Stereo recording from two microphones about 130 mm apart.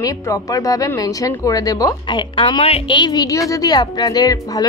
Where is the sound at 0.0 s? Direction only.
25° left (ahead or behind).